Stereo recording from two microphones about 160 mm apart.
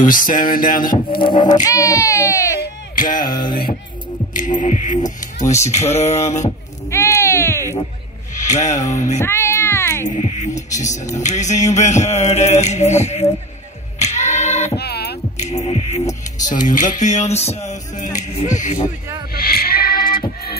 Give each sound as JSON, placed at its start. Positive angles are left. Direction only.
{"t": 0.0, "sound": "a sound", "side_deg": 60}
{"t": 1.2, "sound": "speech", "side_deg": 25}
{"t": 2.6, "sound": "a sound", "side_deg": 60}
{"t": 4.3, "sound": "music", "side_deg": 55}
{"t": 6.9, "sound": "a sound", "side_deg": 15}
{"t": 8.4, "sound": "music", "side_deg": 50}
{"t": 9.2, "sound": "music", "side_deg": 15}
{"t": 10.0, "sound": "music", "side_deg": 50}
{"t": 13.9, "sound": "singing", "side_deg": 45}
{"t": 14.8, "sound": "a sound", "side_deg": 90}
{"t": 15.3, "sound": "music", "side_deg": 45}
{"t": 17.3, "sound": "speech", "side_deg": 40}
{"t": 17.6, "sound": "music", "side_deg": 50}
{"t": 19.3, "sound": "music", "side_deg": 70}